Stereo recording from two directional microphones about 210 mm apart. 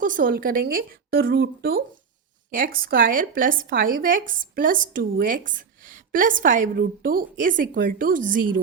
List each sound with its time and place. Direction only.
0.0 s speech: 40° right (ahead or behind)